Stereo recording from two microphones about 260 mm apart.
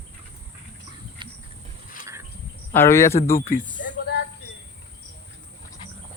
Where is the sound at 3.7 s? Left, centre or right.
Left.